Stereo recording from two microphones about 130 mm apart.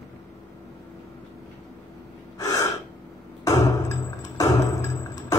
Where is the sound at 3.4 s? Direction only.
30° left (ahead or behind).